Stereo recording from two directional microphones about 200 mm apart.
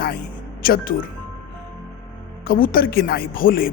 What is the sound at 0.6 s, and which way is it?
Speech, 45° left (ahead or behind).